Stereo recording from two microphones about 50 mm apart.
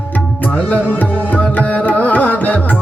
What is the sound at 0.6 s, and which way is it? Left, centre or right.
Music, left.